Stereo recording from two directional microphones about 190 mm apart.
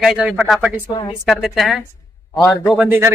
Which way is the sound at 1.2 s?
Centre (ahead or behind).